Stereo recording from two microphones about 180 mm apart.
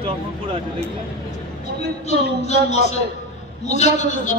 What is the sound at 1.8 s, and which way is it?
Speech, 35° left (ahead or behind).